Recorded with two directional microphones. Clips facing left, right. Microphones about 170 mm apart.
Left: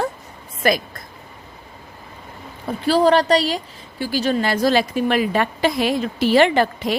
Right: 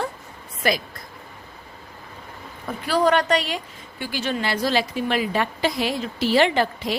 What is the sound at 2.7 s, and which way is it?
A woman's voice, 30° left (ahead or behind).